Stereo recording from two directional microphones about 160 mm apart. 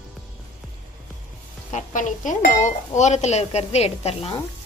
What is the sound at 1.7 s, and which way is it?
A woman's voice, 55° left (ahead or behind).